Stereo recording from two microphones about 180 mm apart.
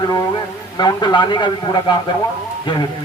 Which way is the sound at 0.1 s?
20° left (ahead or behind).